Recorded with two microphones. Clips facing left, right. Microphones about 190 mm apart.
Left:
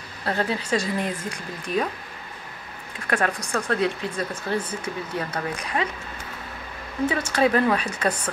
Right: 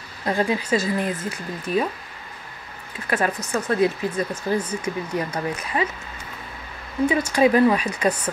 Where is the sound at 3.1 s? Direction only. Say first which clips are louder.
Right 1 dB; 5° right (ahead or behind).